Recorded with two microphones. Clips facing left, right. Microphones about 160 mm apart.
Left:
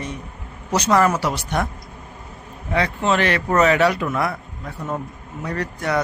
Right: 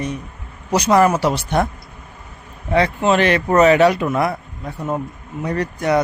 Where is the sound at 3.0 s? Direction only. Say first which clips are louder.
Right 4 dB; 20° right (ahead or behind).